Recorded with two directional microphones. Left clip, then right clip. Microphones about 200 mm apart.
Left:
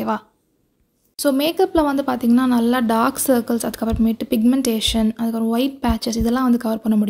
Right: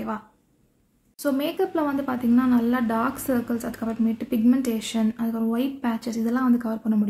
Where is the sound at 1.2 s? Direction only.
45° left (ahead or behind).